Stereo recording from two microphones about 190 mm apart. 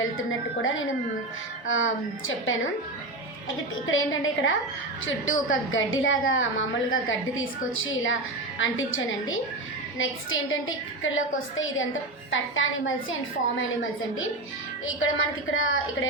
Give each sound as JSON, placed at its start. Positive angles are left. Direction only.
{"t": 0.0, "sound": "a woman's voice", "side_deg": 90}
{"t": 3.8, "sound": "a woman's voice", "side_deg": 90}
{"t": 15.5, "sound": "a woman's voice", "side_deg": 90}